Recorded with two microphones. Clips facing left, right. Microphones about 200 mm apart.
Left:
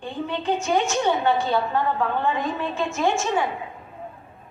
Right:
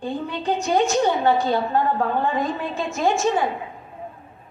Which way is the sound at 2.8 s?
35° right (ahead or behind).